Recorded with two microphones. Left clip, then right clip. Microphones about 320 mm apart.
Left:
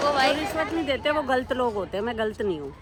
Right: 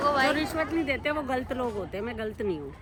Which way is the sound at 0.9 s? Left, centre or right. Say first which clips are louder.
Left 5 dB; centre.